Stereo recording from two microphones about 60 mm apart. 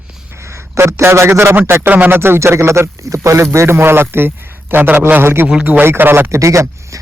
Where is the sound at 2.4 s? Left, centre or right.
Right.